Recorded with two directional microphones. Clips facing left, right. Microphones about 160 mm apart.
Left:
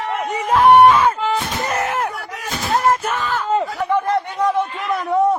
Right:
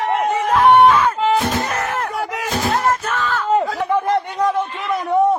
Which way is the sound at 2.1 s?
90° right.